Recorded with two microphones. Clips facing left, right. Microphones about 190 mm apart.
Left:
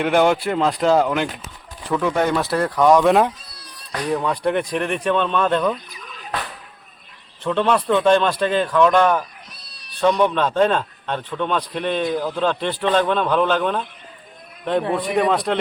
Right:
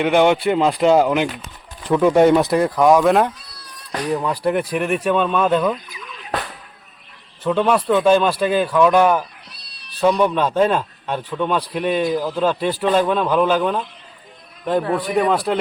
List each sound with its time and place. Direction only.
0.0 s a man's voice: centre (ahead or behind)
5.9 s a sound: 40° left (ahead or behind)
7.4 s a man's voice: 5° right (ahead or behind)